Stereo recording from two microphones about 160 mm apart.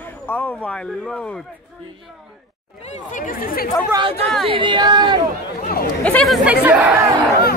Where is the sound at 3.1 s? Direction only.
55° left (ahead or behind).